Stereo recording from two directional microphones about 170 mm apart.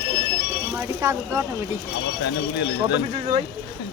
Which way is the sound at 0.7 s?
15° right (ahead or behind).